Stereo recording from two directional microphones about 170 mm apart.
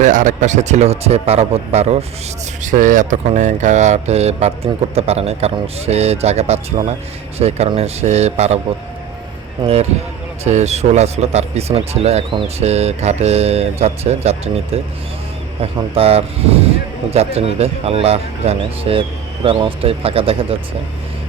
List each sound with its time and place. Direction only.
0.0 s speech: 50° right (ahead or behind)
2.6 s speech: 50° right (ahead or behind)
10.4 s speech: 40° right (ahead or behind)
16.0 s speech: 35° right (ahead or behind)